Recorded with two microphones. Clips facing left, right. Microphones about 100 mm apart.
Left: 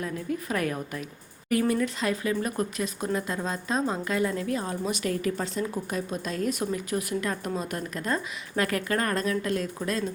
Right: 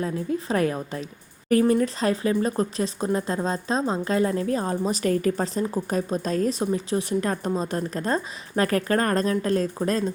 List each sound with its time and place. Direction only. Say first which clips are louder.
0.0 s a woman's voice: right 5 dB; 30° right (ahead or behind)